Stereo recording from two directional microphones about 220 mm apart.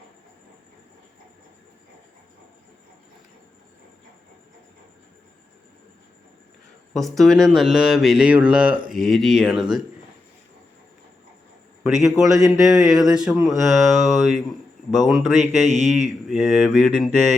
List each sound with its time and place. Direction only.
6.9 s speech: centre (ahead or behind)
11.8 s a man's voice: centre (ahead or behind)